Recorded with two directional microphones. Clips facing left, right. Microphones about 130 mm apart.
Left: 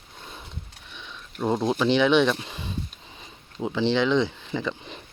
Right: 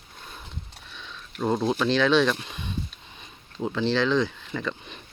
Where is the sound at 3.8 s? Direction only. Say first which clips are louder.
Left 2 dB; 20° left (ahead or behind).